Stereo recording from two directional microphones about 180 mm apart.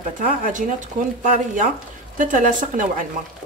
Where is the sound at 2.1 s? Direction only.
45° right (ahead or behind).